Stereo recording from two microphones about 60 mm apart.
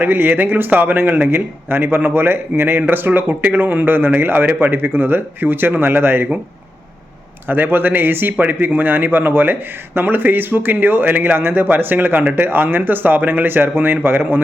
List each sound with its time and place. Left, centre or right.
0.0 s speech: right
7.4 s speech: right